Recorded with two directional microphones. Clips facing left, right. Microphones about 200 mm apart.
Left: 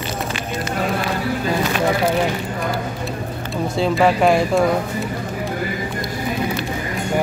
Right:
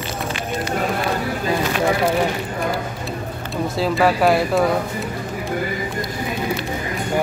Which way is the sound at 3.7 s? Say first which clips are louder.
Left 2 dB; centre (ahead or behind).